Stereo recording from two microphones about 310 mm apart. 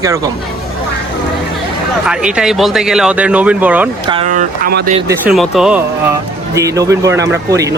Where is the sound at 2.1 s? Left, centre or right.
Centre.